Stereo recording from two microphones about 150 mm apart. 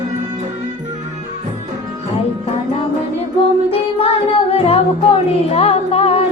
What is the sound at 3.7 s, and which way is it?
Music, 40° left (ahead or behind).